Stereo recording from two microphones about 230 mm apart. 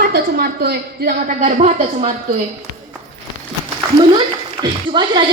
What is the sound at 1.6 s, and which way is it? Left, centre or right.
Speech, right.